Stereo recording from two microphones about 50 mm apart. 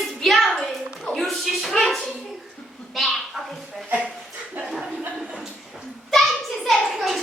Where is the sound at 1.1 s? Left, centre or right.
Centre.